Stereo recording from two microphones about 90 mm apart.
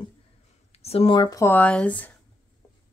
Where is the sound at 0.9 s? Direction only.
90° left.